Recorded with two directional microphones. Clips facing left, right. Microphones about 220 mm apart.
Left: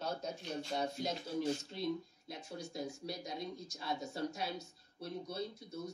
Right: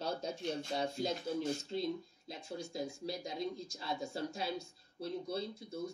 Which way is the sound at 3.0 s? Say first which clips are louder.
Right 3 dB; 25° right (ahead or behind).